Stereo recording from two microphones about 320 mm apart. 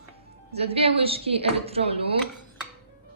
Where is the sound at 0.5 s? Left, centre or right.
Centre.